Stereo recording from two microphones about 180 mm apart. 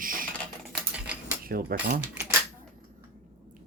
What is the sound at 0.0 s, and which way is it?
Typing, 50° right (ahead or behind).